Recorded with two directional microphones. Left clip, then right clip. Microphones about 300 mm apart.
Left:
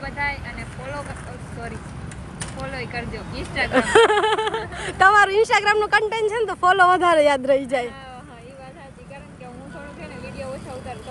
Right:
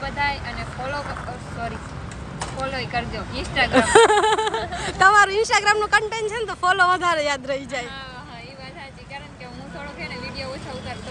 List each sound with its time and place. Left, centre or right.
0.0 s vehicle: centre
3.6 s speech: centre